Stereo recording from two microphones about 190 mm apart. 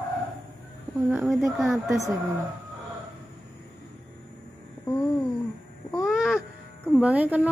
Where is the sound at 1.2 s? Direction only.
Centre (ahead or behind).